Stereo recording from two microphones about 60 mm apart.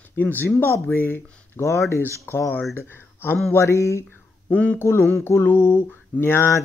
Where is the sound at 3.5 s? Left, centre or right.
Left.